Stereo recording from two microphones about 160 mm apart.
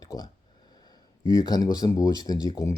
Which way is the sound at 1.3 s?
25° left (ahead or behind).